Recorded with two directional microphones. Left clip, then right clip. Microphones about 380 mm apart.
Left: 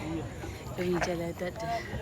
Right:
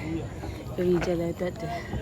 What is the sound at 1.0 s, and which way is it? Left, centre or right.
Speech, centre.